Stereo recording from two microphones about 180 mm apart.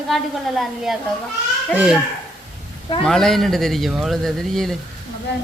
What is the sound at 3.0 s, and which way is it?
A man's voice, 5° left (ahead or behind).